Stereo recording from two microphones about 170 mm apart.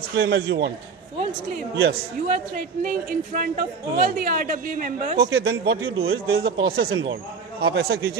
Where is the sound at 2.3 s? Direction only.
50° right (ahead or behind).